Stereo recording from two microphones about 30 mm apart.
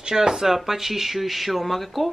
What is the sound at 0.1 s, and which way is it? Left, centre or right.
Speech, centre.